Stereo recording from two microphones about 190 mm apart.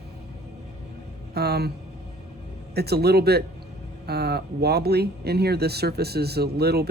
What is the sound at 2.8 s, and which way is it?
Speech, 55° right (ahead or behind).